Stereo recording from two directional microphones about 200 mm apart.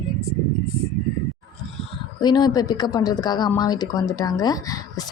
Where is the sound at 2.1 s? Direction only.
20° left (ahead or behind).